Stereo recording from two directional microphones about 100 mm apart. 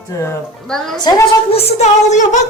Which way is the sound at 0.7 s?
5° left (ahead or behind).